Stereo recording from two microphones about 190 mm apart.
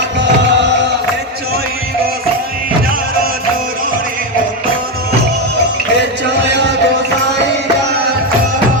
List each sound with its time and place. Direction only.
0.6 s music: 65° right (ahead or behind)